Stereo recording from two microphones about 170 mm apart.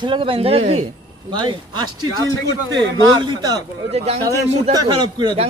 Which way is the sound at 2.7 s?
25° right (ahead or behind).